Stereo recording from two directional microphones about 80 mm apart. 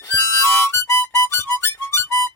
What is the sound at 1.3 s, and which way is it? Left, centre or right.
Music, left.